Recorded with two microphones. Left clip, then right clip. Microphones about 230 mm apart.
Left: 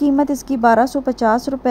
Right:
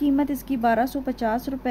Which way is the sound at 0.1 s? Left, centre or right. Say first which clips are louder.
Left 6 dB; centre.